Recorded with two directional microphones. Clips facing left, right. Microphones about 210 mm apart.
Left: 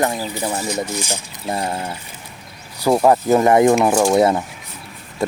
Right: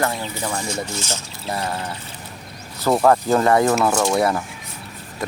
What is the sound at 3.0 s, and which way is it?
Speech, 15° left (ahead or behind).